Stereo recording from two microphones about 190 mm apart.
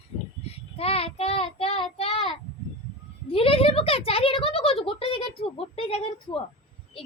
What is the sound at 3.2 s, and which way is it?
A woman's voice, 30° left (ahead or behind).